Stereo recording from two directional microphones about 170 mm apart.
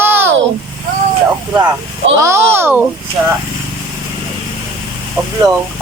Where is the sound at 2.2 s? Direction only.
15° right (ahead or behind).